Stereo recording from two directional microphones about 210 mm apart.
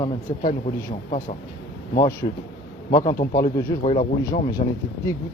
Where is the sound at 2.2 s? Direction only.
25° left (ahead or behind).